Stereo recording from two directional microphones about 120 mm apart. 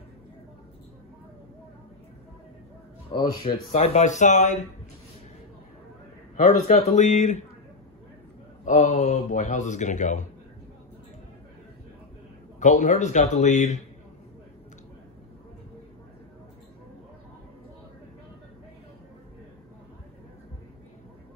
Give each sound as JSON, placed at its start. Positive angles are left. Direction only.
{"t": 3.1, "sound": "speech", "side_deg": 45}
{"t": 3.7, "sound": "a man's voice", "side_deg": 70}
{"t": 6.4, "sound": "speech", "side_deg": 75}
{"t": 8.6, "sound": "a man's voice", "side_deg": 85}
{"t": 12.5, "sound": "a man's voice", "side_deg": 85}